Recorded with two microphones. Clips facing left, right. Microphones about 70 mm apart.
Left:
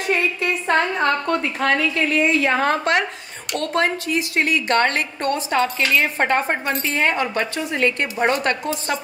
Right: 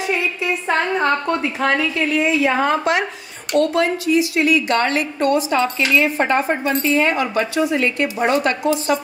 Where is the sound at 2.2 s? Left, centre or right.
Left.